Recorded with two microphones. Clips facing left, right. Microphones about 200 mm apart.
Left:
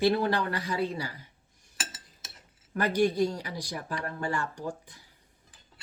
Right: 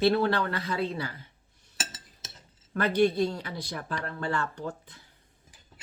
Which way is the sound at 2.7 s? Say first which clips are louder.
Right 2 dB; 10° left (ahead or behind).